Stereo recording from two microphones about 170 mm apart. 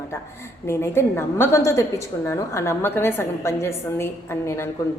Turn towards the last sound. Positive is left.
turn(degrees=15)  # may be behind; listen again after turning